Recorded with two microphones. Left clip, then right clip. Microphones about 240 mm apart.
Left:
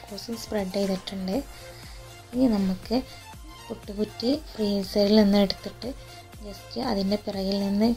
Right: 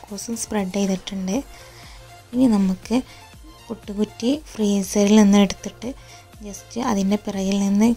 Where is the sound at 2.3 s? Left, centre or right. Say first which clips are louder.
Right 5 dB; right.